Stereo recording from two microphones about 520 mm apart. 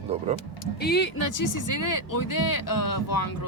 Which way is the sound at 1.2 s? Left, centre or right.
Left.